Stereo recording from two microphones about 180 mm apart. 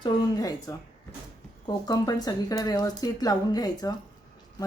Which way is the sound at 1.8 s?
20° left (ahead or behind).